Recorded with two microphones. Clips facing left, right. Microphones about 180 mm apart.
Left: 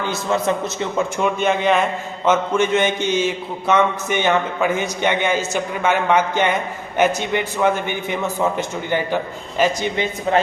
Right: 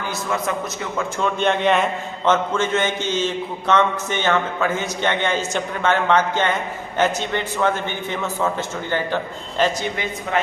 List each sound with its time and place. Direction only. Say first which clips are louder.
0.0 s a man's voice: left 4 dB; 25° left (ahead or behind)
1.2 s a man's voice: even; 5° left (ahead or behind)
10.3 s speech: left 5 dB; 30° left (ahead or behind)